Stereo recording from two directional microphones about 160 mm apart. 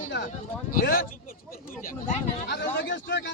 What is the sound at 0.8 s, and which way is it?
Speech, 65° left (ahead or behind).